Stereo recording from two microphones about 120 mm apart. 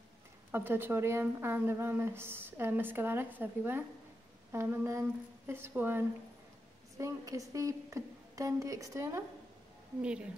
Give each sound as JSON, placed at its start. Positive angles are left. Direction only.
{"t": 0.5, "sound": "speech", "side_deg": -20}